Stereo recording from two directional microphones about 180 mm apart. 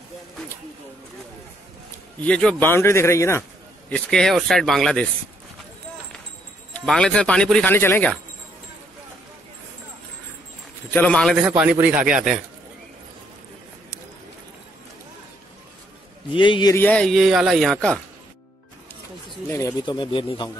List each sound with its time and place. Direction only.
2.2 s speech: 5° left (ahead or behind)
3.9 s speech: 5° left (ahead or behind)
6.7 s speech: 5° left (ahead or behind)
10.9 s speech: 5° left (ahead or behind)
16.3 s speech: 25° left (ahead or behind)
16.7 s speech: 10° left (ahead or behind)
19.5 s speech: 20° left (ahead or behind)